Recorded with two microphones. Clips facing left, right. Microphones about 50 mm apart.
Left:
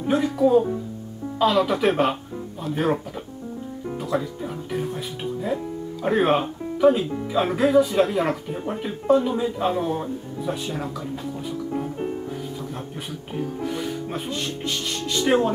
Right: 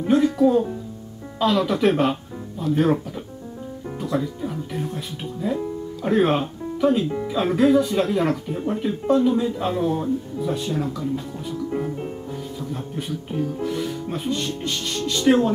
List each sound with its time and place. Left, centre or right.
0.1 s speech: centre
12.5 s speech: centre